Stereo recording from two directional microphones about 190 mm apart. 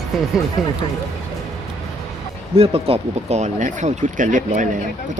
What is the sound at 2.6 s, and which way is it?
Speech, 30° right (ahead or behind).